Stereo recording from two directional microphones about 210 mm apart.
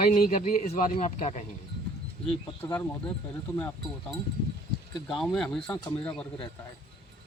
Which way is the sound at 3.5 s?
10° left (ahead or behind).